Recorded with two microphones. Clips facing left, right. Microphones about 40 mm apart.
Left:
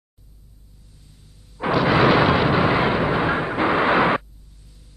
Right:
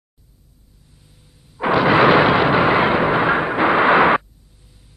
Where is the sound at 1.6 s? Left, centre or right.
Centre.